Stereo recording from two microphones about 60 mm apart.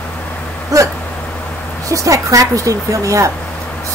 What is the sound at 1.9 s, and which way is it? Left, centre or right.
A woman's voice, right.